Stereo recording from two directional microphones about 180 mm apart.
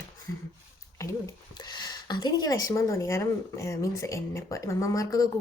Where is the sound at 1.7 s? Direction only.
25° left (ahead or behind).